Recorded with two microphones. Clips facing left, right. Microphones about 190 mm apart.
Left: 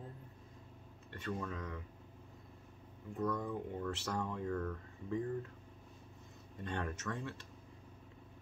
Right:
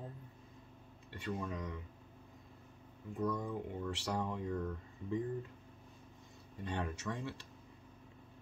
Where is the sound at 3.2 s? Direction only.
15° right (ahead or behind).